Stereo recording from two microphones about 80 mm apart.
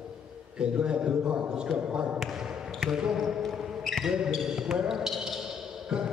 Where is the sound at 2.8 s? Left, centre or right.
Centre.